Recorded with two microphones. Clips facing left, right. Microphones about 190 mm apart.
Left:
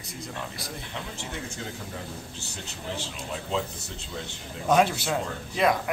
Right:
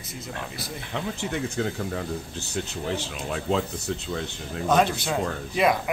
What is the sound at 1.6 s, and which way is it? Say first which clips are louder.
Speech: right 14 dB; 60° right (ahead or behind).